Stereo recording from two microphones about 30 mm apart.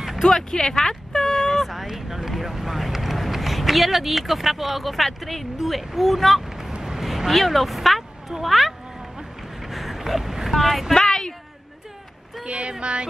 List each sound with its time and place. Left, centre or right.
0.2 s vehicle: centre
1.7 s speech: centre
5.6 s speech: centre
6.8 s a sound: centre
7.2 s speech: centre
9.6 s a sound: centre
10.5 s speech: centre
11.0 s a sound: left
12.4 s speech: right